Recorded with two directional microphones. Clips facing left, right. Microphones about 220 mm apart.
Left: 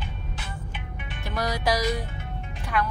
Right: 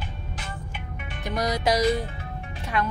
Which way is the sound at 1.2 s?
20° right (ahead or behind).